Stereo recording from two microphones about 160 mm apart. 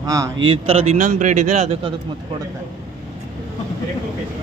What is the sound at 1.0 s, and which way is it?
Speech, 50° right (ahead or behind).